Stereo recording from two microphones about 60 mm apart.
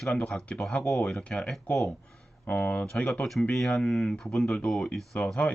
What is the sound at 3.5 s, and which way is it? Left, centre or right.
Speech, centre.